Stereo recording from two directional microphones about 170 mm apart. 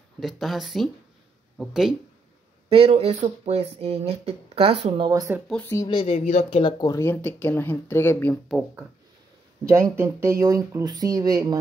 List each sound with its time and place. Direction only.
0.2 s speech: centre (ahead or behind)
2.7 s speech: 35° right (ahead or behind); by 5.4 s 20° right (ahead or behind)
5.5 s speech: 10° left (ahead or behind)
5.9 s speech: 30° left (ahead or behind)
6.6 s speech: 20° left (ahead or behind)
8.5 s speech: centre (ahead or behind)
9.7 s speech: 15° right (ahead or behind)